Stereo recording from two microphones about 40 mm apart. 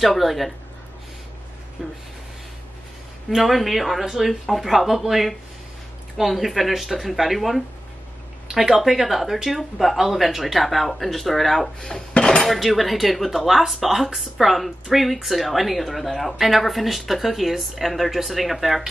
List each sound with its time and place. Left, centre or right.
0.0 s speech: centre
1.8 s speech: centre
3.3 s speech: centre
12.2 s dishes: centre
12.4 s speech: centre